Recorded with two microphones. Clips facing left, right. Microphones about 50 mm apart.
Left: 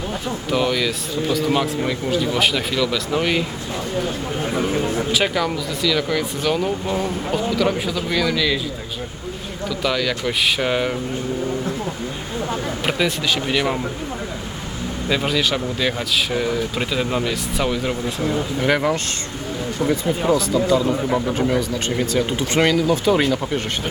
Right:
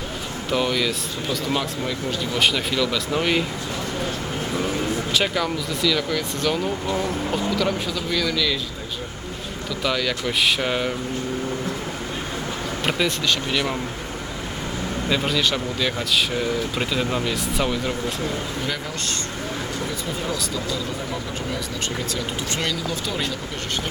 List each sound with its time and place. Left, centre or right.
0.5 s speech: centre
1.5 s speech: centre
4.5 s speech: left
5.1 s speech: centre
6.8 s speech: left
7.5 s speech: centre
9.8 s speech: centre
12.8 s speech: centre
15.1 s speech: centre
18.6 s speech: left